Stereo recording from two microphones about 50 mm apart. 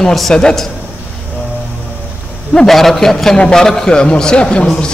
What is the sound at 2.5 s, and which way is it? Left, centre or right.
A man's voice, centre.